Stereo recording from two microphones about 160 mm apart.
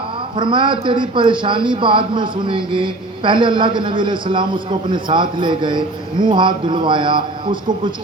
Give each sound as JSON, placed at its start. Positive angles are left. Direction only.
{"t": 0.3, "sound": "a man's voice", "side_deg": -30}